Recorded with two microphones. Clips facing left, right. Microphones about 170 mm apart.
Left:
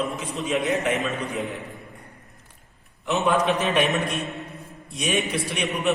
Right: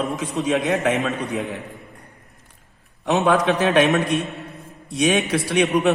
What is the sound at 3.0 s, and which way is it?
Speech, 75° right (ahead or behind).